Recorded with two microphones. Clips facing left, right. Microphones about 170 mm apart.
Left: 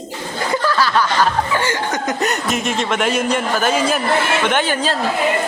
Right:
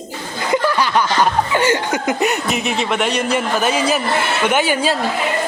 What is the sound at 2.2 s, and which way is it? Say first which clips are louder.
A man's voice: right 1 dB; 5° right (ahead or behind).